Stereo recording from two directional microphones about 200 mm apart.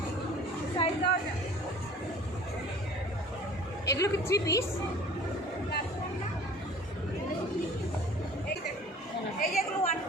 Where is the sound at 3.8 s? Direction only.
15° left (ahead or behind).